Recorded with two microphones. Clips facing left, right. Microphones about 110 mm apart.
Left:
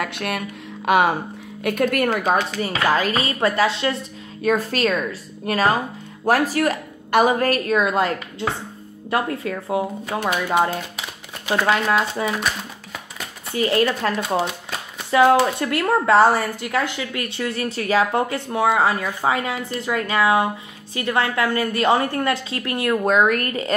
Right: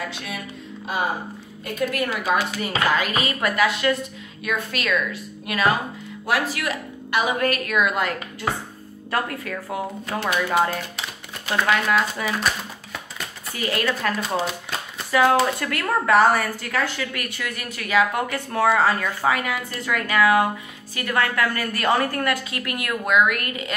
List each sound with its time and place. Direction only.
0.0 s speech: 65° left (ahead or behind)
0.8 s speech: 75° left (ahead or behind)
1.6 s speech: 60° left (ahead or behind)
2.3 s a woman's voice: 40° left (ahead or behind); by 12.4 s 25° left (ahead or behind)
13.5 s speech: 30° left (ahead or behind)
14.3 s shuffling cards: centre (ahead or behind)
15.0 s speech: 25° left (ahead or behind)